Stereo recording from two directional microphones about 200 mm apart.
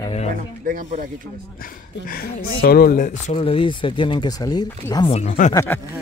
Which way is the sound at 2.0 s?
50° left (ahead or behind).